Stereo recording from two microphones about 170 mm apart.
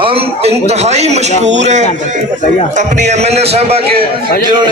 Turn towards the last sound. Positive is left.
turn(degrees=-35)  # may be behind; listen again after turning